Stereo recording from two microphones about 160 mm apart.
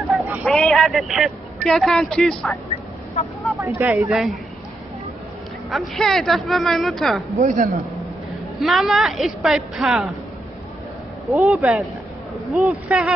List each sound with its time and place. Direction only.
0.2 s a sound: 10° right (ahead or behind)
0.5 s a man's voice: 5° left (ahead or behind)
3.5 s speech: 15° right (ahead or behind)
4.1 s speech: centre (ahead or behind)
5.7 s speech: centre (ahead or behind)
7.3 s a man's voice: 50° right (ahead or behind)
8.5 s speech: centre (ahead or behind)
11.4 s speech: centre (ahead or behind)